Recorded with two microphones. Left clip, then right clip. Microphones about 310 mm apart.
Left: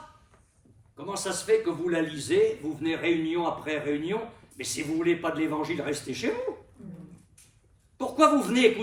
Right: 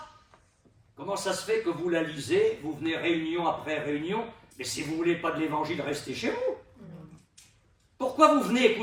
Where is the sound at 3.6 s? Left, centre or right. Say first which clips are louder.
Left 1 dB; centre.